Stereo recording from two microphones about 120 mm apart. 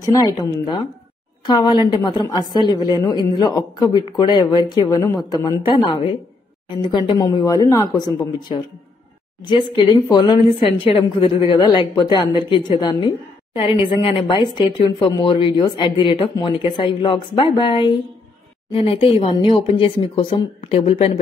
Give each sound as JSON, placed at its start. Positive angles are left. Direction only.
{"t": 0.0, "sound": "a woman's voice", "side_deg": 30}
{"t": 8.0, "sound": "a woman's voice", "side_deg": 40}
{"t": 20.6, "sound": "speech", "side_deg": 60}